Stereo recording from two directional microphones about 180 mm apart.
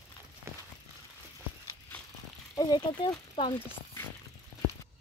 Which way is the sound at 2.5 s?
20° left (ahead or behind).